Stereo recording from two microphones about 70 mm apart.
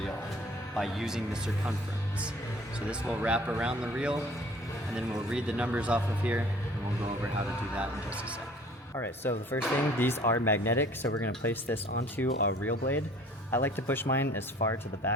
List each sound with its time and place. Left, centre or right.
0.8 s speech: centre
2.9 s speech: centre
5.3 s speech: centre
9.0 s speech: left